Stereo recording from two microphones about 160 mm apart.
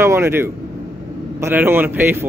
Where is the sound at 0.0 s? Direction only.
15° right (ahead or behind).